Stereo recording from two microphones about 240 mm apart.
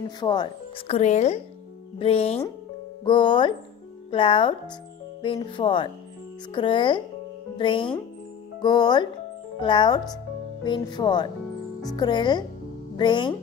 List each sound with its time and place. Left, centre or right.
0.2 s speech: centre